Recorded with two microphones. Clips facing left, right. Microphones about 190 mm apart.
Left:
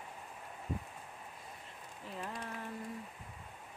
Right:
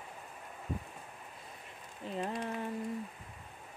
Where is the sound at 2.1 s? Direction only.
20° right (ahead or behind).